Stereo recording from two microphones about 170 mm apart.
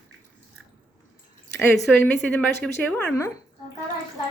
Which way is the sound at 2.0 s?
5° left (ahead or behind).